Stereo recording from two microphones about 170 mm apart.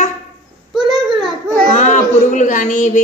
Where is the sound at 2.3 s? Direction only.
50° left (ahead or behind).